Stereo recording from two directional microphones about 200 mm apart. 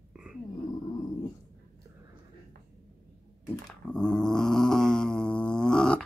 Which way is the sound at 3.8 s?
5° left (ahead or behind).